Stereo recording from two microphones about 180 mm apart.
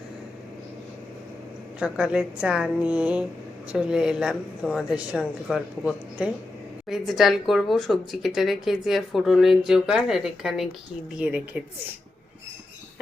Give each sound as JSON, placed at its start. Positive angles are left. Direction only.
{"t": 1.8, "sound": "a woman's voice", "side_deg": -5}